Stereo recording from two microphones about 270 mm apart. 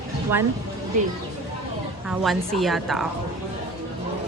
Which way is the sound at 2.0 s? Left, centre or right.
Centre.